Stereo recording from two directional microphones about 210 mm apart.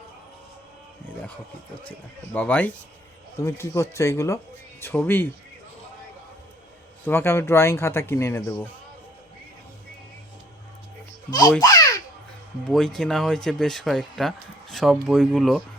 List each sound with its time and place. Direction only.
1.8 s speech: 5° left (ahead or behind)
7.0 s speech: 10° left (ahead or behind)
11.3 s speech: 15° left (ahead or behind)
11.6 s baby laughter: 15° left (ahead or behind)
12.6 s speech: centre (ahead or behind)